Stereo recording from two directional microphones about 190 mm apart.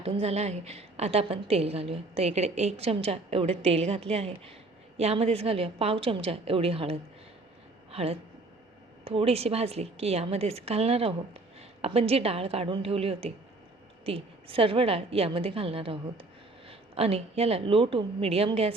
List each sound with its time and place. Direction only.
0.0 s a woman's voice: 30° right (ahead or behind)